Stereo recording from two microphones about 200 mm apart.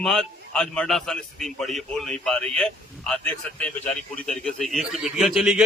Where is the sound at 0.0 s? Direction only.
Centre (ahead or behind).